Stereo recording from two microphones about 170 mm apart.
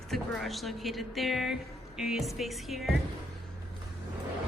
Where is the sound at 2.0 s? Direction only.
Centre (ahead or behind).